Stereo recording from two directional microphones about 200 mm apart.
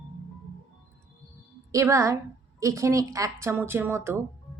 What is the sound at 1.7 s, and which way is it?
Speech, 15° right (ahead or behind).